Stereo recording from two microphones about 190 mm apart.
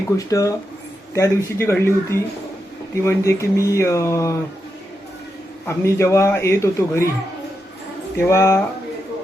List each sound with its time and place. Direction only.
0.2 s a man's voice: 15° left (ahead or behind)
5.6 s a man's voice: 15° left (ahead or behind)
8.2 s a man's voice: 15° left (ahead or behind)